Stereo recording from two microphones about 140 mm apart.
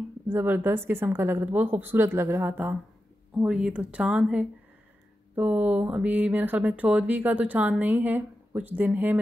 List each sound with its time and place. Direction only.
0.3 s speech: 15° right (ahead or behind)